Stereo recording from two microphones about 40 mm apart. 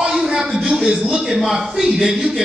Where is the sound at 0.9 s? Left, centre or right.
Centre.